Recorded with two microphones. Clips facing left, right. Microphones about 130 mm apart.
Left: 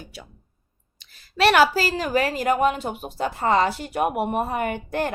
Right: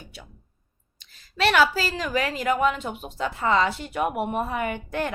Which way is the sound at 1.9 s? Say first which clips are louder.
Left 4 dB; 40° left (ahead or behind).